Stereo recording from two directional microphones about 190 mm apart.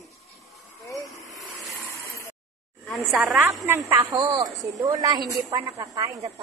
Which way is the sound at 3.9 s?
20° right (ahead or behind).